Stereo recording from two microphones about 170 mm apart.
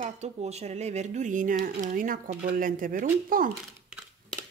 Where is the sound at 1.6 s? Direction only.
50° right (ahead or behind).